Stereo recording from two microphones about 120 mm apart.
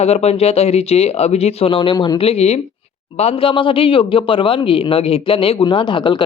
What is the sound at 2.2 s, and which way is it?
A man's voice, 60° left (ahead or behind).